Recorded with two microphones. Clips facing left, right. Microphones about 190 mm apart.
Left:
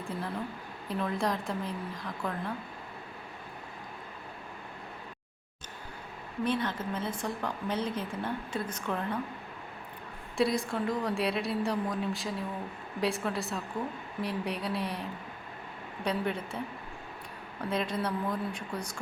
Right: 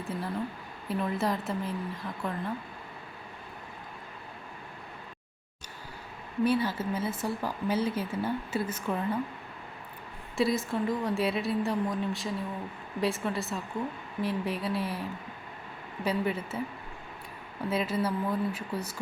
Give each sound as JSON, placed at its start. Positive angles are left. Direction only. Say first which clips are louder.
{"t": 0.1, "sound": "a woman's voice", "louder": "right 3 dB", "side_deg": 0}
{"t": 6.4, "sound": "speech", "louder": "right 4 dB", "side_deg": -10}
{"t": 10.3, "sound": "a woman's voice", "louder": "right 1 dB", "side_deg": 0}
{"t": 16.0, "sound": "a woman's voice", "louder": "right 2 dB", "side_deg": -5}
{"t": 17.7, "sound": "a woman's voice", "louder": "right 2 dB", "side_deg": -5}